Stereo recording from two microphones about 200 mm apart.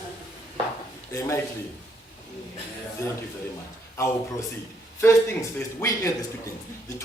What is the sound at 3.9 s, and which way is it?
Speech, 15° left (ahead or behind).